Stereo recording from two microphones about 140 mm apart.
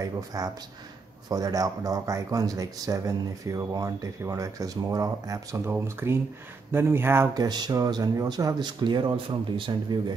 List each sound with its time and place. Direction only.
0.0 s speech: 25° right (ahead or behind)
7.3 s speech: 30° right (ahead or behind)